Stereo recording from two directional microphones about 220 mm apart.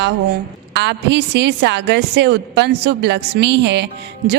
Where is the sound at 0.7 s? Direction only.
50° right (ahead or behind).